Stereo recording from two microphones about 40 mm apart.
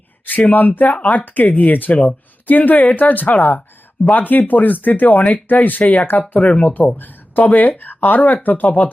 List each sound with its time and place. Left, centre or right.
0.3 s speech: left
5.8 s speech: left
6.7 s speech: left